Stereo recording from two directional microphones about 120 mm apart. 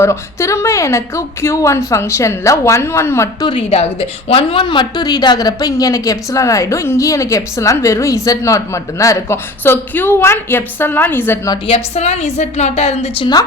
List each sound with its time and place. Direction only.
0.0 s speech: 25° left (ahead or behind)
3.4 s a woman's voice: 55° left (ahead or behind); by 11.3 s 15° left (ahead or behind)
11.6 s a woman's voice: 60° left (ahead or behind)